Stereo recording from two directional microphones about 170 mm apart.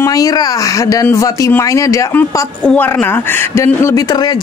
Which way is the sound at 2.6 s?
5° left (ahead or behind).